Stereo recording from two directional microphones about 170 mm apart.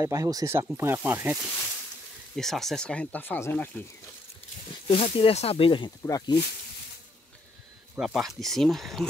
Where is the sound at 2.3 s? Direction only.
Centre (ahead or behind).